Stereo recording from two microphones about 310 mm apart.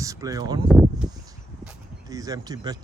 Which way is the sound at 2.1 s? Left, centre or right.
Centre.